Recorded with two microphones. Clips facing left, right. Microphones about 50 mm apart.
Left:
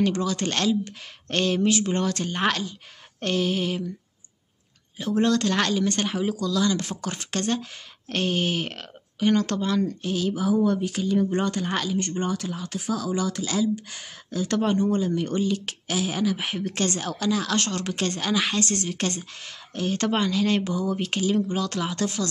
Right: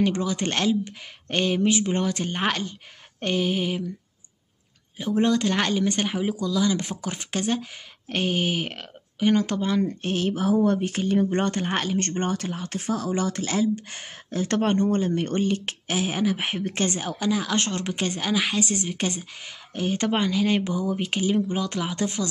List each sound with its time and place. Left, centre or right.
0.0 s a woman's voice: centre
4.9 s a woman's voice: centre
10.0 s speech: right
12.0 s a woman's voice: right; by 22.3 s centre